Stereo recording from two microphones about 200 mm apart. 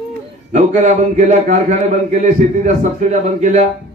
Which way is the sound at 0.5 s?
35° right (ahead or behind).